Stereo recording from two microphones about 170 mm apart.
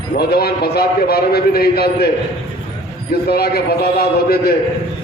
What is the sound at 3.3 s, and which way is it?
A man's voice, 65° left (ahead or behind).